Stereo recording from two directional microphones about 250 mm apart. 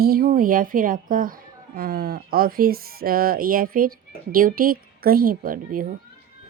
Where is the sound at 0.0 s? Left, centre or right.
Right.